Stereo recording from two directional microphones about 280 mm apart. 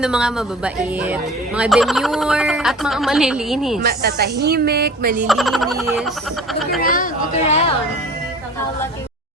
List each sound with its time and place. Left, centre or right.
0.0 s speech: centre
3.8 s speech: right
5.2 s speech: centre
6.8 s speech: left